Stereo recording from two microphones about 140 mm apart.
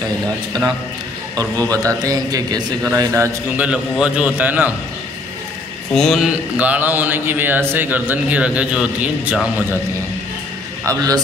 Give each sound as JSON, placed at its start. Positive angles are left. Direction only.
{"t": 1.7, "sound": "a man's voice", "side_deg": -25}
{"t": 3.1, "sound": "mantra", "side_deg": -15}
{"t": 5.9, "sound": "mantra", "side_deg": 0}
{"t": 10.9, "sound": "a man's voice", "side_deg": -25}